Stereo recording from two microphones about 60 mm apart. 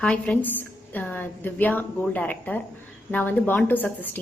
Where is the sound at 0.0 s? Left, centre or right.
Centre.